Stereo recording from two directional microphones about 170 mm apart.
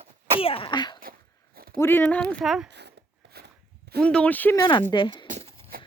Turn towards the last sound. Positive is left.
turn(degrees=-45)  # may be behind; listen again after turning